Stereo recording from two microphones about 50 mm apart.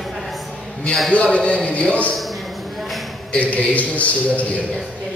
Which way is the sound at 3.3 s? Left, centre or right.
Left.